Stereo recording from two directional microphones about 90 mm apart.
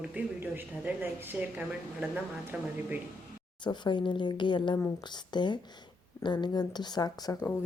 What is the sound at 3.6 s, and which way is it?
Speech, 60° left (ahead or behind).